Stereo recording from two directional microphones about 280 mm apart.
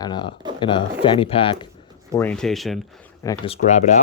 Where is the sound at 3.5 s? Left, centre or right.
Left.